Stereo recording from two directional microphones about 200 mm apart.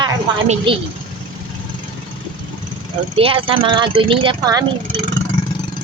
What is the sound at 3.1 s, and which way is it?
Speech, 30° right (ahead or behind).